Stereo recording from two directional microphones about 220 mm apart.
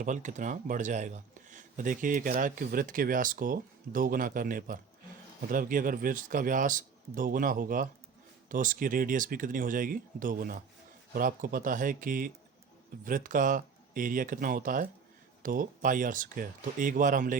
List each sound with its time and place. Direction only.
0.0 s speech: 35° right (ahead or behind)